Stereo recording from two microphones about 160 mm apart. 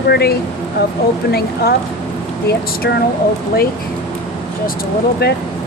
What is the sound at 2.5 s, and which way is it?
Speech, 85° left.